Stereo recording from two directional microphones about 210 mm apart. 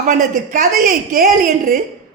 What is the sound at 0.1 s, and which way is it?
A woman's voice, 40° right (ahead or behind).